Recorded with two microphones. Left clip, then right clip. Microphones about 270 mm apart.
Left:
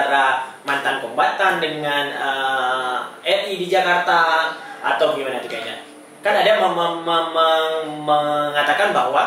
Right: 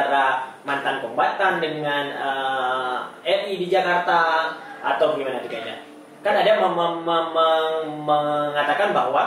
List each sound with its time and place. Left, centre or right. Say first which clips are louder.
0.0 s a sound: left 3 dB; centre
5.0 s a man's voice: left 2 dB; centre
8.1 s mantra: left 3 dB; right
8.4 s a man's voice: left 3 dB; centre